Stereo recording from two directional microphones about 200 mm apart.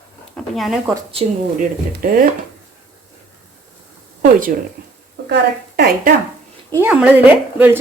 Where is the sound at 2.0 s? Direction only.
45° right (ahead or behind).